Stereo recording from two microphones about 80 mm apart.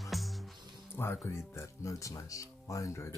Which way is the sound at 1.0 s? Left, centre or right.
Left.